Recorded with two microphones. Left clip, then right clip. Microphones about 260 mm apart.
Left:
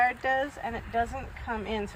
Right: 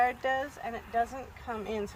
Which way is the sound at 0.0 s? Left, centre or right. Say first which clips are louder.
Left 3 dB; right.